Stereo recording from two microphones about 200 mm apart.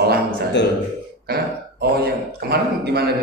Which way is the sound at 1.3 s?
50° right (ahead or behind).